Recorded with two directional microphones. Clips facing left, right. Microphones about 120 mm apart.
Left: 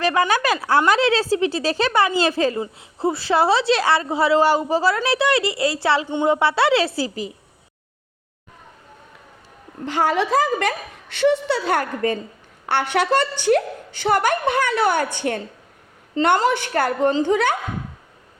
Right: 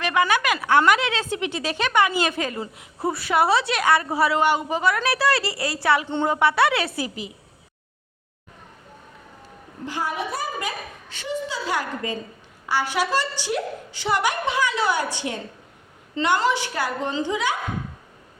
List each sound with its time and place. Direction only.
0.0 s a woman's voice: 35° left (ahead or behind)
4.9 s a woman's voice: 25° left (ahead or behind)
6.1 s a woman's voice: 15° left (ahead or behind)
6.3 s a woman's voice: 25° left (ahead or behind)
9.8 s a woman's voice: 75° left (ahead or behind); by 17.6 s 55° left (ahead or behind)